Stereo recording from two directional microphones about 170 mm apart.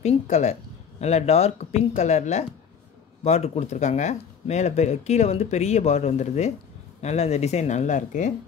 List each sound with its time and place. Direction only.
0.0 s speech: 40° left (ahead or behind)